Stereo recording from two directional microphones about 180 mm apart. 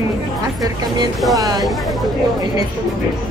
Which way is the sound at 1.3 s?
20° right (ahead or behind).